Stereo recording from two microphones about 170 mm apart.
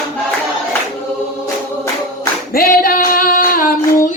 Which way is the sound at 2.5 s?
60° left (ahead or behind).